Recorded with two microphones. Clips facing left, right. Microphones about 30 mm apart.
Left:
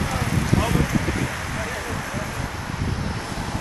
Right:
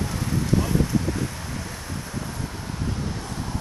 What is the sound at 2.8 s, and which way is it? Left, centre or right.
Vehicle, left.